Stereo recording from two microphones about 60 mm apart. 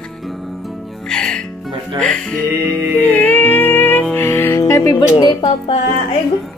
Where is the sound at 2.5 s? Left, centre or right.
Right.